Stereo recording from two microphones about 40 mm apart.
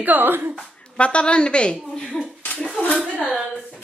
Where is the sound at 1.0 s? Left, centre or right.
Left.